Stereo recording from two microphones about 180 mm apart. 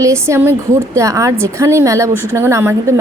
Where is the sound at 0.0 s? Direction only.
15° right (ahead or behind).